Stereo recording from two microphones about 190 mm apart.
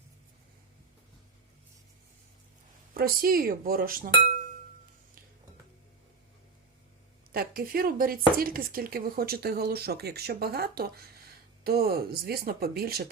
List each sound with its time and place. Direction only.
2.9 s speech: 50° right (ahead or behind)
7.3 s speech: 50° right (ahead or behind)